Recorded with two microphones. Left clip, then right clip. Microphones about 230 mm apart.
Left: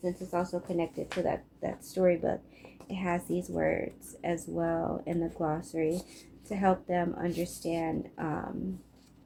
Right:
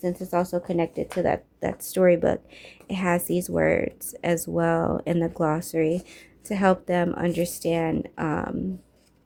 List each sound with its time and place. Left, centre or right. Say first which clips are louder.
0.0 s speech: right 7 dB; right